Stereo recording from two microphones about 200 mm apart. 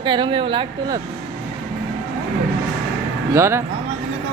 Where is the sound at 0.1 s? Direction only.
25° right (ahead or behind).